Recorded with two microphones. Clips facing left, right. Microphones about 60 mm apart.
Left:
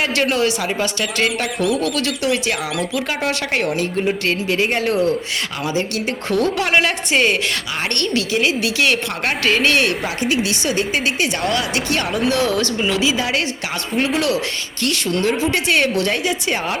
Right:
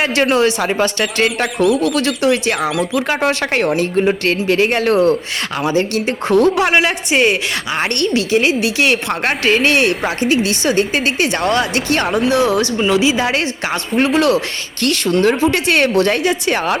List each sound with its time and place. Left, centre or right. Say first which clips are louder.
0.0 s a woman's voice: right 4 dB; right
0.6 s speech: right 5 dB; right
2.0 s speech: right 5 dB; right
5.6 s speech: right 6 dB; right
6.1 s a woman's voice: right 7 dB; right
6.7 s a woman's voice: right 2 dB; centre
8.3 s a woman's voice: right 4 dB; right
10.0 s speech: right 4 dB; right
12.3 s a woman's voice: right 4 dB; centre; by 14.3 s right
15.2 s speech: right 5 dB; right